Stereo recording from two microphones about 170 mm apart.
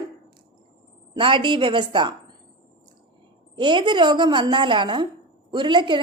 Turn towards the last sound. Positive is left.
turn(degrees=-30)  # may be behind; listen again after turning